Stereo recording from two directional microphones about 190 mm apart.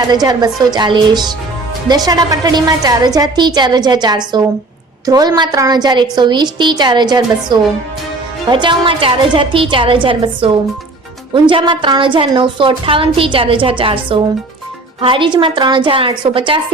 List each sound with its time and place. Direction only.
0.1 s a woman's voice: 20° right (ahead or behind)